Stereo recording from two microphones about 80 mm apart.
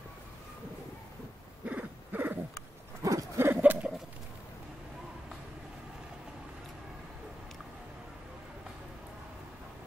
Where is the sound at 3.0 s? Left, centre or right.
Right.